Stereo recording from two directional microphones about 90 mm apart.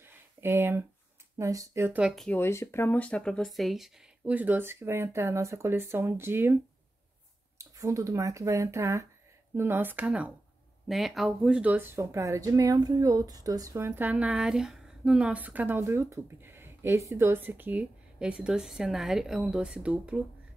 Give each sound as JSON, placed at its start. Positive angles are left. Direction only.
{"t": 0.0, "sound": "a sound", "side_deg": -25}
{"t": 1.4, "sound": "speech", "side_deg": -35}
{"t": 1.9, "sound": "speech", "side_deg": -10}
{"t": 2.3, "sound": "speech", "side_deg": 30}
{"t": 4.2, "sound": "speech", "side_deg": -20}
{"t": 7.5, "sound": "speech", "side_deg": -35}
{"t": 10.9, "sound": "speech", "side_deg": 0}